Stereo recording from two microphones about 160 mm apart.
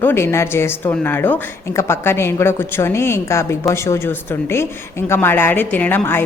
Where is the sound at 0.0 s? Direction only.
15° left (ahead or behind).